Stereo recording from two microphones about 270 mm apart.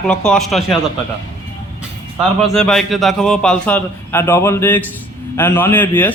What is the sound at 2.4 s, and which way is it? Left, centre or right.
A man's voice, centre.